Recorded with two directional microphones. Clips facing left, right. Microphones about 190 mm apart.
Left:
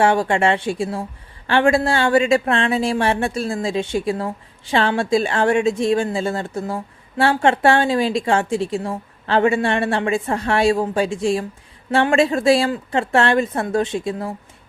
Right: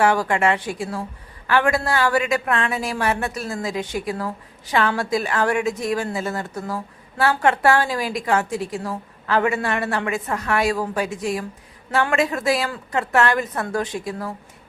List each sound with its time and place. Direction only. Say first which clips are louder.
0.0 s a woman's voice: left 2 dB; 25° left (ahead or behind)